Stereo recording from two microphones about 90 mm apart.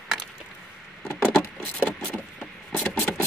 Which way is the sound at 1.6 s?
20° left (ahead or behind).